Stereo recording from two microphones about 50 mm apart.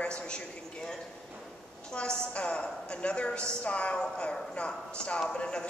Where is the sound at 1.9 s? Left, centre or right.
Centre.